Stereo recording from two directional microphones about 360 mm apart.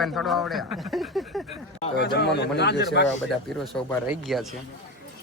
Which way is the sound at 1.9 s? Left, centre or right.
Left.